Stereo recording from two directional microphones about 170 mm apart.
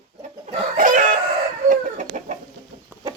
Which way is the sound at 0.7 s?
50° right (ahead or behind).